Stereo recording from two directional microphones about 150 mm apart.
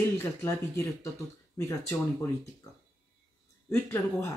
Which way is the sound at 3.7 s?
15° left (ahead or behind).